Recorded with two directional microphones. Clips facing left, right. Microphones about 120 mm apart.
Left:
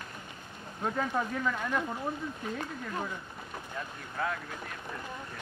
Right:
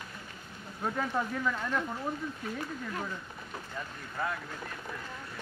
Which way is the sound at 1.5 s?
15° left (ahead or behind).